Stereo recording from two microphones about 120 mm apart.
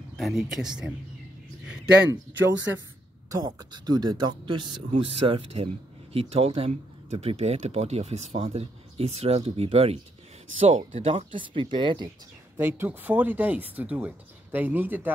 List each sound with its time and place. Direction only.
0.2 s speech: centre (ahead or behind)
3.3 s speech: 35° right (ahead or behind)
12.5 s speech: 15° right (ahead or behind)